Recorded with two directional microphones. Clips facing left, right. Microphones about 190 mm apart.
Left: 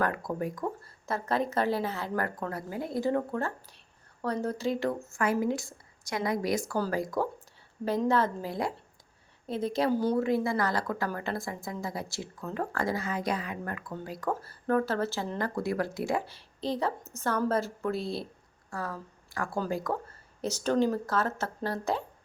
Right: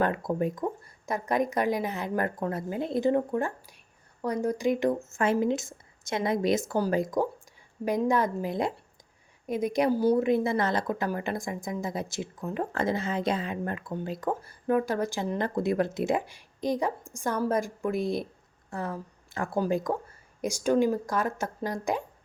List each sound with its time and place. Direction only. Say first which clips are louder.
0.0 s a woman's voice: right 4 dB; 25° right (ahead or behind)